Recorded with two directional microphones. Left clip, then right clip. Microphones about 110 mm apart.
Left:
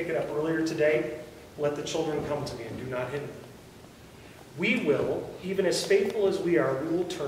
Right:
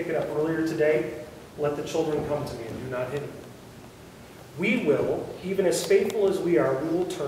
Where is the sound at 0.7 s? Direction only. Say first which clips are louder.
Right 1 dB; 15° left (ahead or behind).